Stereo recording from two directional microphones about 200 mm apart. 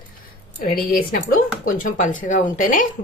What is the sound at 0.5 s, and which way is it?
Speech, 45° left (ahead or behind).